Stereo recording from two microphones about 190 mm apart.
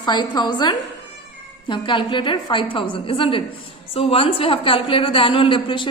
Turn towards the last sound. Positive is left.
turn(degrees=25)  # may be behind; listen again after turning